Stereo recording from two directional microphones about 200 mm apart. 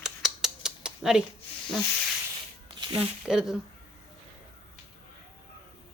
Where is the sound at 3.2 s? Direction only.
5° right (ahead or behind).